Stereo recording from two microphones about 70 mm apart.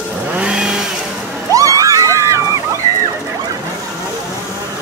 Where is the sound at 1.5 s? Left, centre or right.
Right.